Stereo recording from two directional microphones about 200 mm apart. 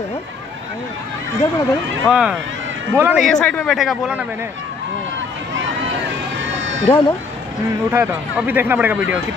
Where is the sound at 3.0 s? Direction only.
10° right (ahead or behind).